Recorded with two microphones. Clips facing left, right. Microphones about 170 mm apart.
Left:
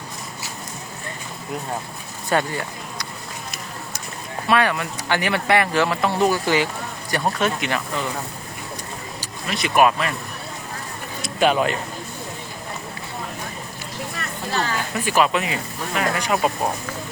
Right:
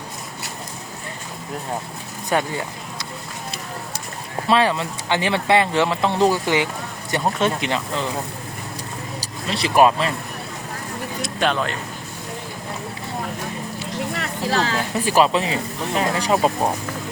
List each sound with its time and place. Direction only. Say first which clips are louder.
2.3 s speech: even; 15° right (ahead or behind)
4.4 s speech: right 1 dB; 25° right (ahead or behind)
9.2 s speech: right 1 dB; 30° right (ahead or behind)
11.2 s a sound: left 4 dB; 5° left (ahead or behind)
14.1 s a sound: right 4 dB; 90° right
15.0 s speech: right 2 dB; 30° right (ahead or behind)